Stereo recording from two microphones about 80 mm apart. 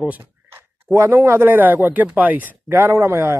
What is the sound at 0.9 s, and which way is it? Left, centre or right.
Speech, right.